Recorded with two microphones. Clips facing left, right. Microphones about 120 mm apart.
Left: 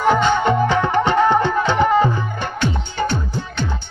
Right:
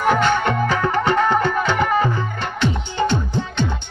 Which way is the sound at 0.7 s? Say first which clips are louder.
Left 2 dB; 20° left (ahead or behind).